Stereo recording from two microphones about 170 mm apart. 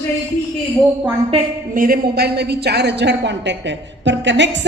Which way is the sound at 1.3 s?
35° right (ahead or behind).